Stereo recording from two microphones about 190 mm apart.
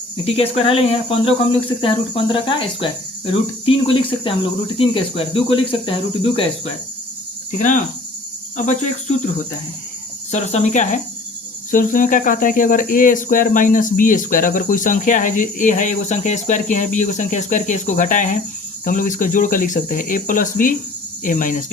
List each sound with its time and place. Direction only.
0.3 s cricket: 30° left (ahead or behind)
8.5 s cricket: 40° left (ahead or behind)
10.3 s cricket: 40° left (ahead or behind)
11.7 s speech: 45° left (ahead or behind)